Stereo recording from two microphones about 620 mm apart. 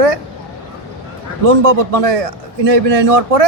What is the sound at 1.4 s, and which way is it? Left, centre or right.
A man's voice, right.